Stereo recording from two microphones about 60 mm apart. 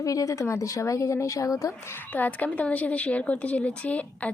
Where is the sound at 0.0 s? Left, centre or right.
Left.